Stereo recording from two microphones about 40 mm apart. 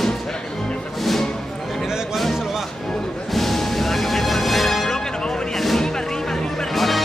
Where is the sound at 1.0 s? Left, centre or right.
Centre.